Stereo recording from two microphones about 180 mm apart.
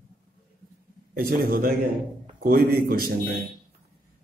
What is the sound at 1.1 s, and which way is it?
A man's voice, 50° right (ahead or behind).